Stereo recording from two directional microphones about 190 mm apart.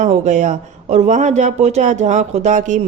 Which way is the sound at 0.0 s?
40° right (ahead or behind).